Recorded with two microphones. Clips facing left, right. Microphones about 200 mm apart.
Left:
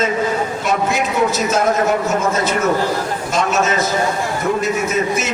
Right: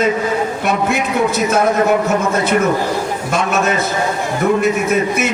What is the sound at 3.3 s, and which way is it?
Speech, 55° right (ahead or behind).